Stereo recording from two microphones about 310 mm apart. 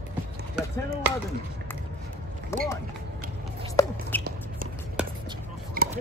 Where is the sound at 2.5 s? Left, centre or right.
Centre.